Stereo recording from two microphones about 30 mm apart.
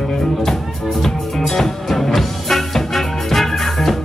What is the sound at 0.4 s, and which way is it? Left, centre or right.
Music, centre.